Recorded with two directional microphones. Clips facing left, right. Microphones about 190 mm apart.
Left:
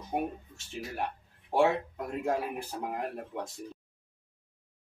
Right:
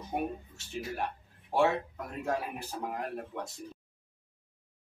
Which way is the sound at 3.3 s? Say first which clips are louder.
Left 2 dB; 15° left (ahead or behind).